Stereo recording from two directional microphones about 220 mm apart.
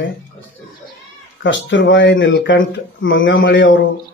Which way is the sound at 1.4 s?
55° left (ahead or behind).